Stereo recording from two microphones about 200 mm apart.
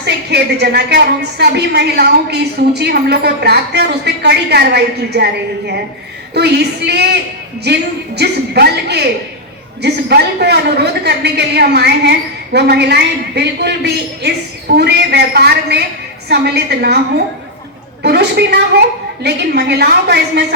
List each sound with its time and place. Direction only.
0.0 s speech: 55° right (ahead or behind)